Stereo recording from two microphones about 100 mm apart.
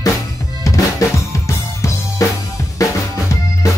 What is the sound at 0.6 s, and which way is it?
Drum, 35° left (ahead or behind).